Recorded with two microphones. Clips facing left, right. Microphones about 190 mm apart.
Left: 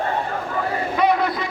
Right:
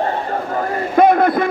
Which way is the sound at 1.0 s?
50° right (ahead or behind).